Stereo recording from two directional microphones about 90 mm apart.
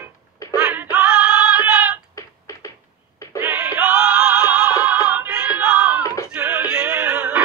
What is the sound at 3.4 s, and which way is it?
Music, 15° right (ahead or behind).